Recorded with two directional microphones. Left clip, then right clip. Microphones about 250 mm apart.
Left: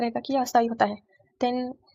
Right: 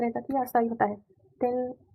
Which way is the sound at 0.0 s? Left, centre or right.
Left.